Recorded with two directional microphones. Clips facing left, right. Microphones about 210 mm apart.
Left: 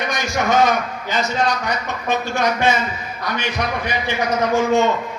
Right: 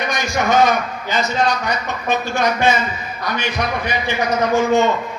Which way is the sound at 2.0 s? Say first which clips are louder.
Right 1 dB; 30° right (ahead or behind).